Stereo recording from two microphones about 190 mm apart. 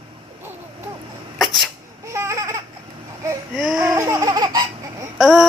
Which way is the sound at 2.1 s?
15° right (ahead or behind).